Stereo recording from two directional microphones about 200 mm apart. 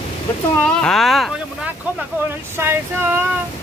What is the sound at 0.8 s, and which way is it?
Speech, centre (ahead or behind).